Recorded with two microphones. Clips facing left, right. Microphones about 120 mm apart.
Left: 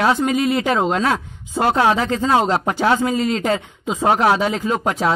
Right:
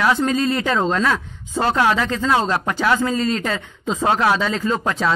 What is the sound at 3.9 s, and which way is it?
Speech, 10° left (ahead or behind).